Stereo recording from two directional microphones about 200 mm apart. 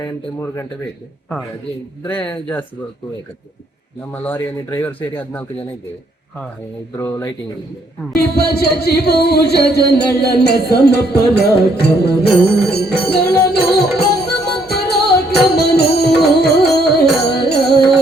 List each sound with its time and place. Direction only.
0.0 s speech: 15° left (ahead or behind)
2.0 s speech: 5° left (ahead or behind)
4.1 s speech: 10° left (ahead or behind)
6.9 s speech: 15° left (ahead or behind)
8.1 s speech: 50° left (ahead or behind)
13.5 s music: 55° left (ahead or behind)